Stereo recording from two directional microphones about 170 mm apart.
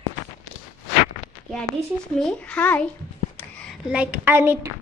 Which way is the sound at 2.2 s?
5° left (ahead or behind).